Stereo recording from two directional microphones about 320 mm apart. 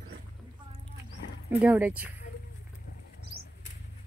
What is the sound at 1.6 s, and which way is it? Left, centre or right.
Speech, centre.